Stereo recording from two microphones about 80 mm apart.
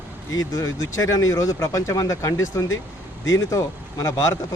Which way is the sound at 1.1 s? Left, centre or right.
Left.